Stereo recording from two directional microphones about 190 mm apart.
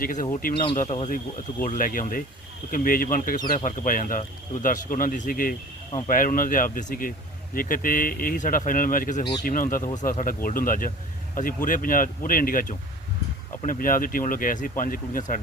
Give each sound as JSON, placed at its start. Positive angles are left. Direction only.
{"t": 0.0, "sound": "speech", "side_deg": 45}
{"t": 0.5, "sound": "speech", "side_deg": 25}
{"t": 0.8, "sound": "speech", "side_deg": 40}